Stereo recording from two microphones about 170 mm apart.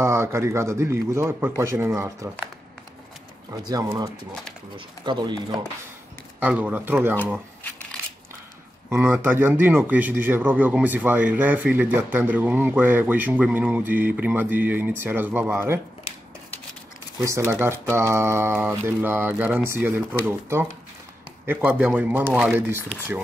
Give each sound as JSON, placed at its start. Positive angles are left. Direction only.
{"t": 0.0, "sound": "a man's voice", "side_deg": -15}
{"t": 3.6, "sound": "speech", "side_deg": -20}
{"t": 4.3, "sound": "speech", "side_deg": 5}
{"t": 4.7, "sound": "speech", "side_deg": -25}
{"t": 6.4, "sound": "a man's voice", "side_deg": -10}
{"t": 8.9, "sound": "a man's voice", "side_deg": -10}
{"t": 17.2, "sound": "a man's voice", "side_deg": -20}